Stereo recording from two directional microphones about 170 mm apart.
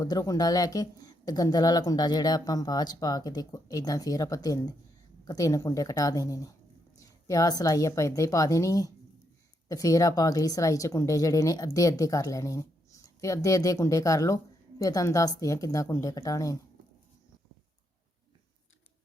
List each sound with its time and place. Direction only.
0.0 s speech: 20° left (ahead or behind)